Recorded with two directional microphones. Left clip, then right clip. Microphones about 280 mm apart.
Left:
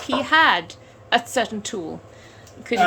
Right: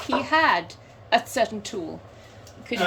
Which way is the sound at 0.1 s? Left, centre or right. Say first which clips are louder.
Left 4 dB; centre.